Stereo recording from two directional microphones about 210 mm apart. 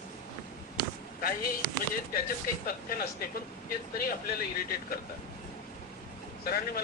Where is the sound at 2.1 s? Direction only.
45° left (ahead or behind).